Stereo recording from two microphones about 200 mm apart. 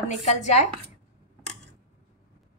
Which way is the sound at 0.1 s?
35° left (ahead or behind).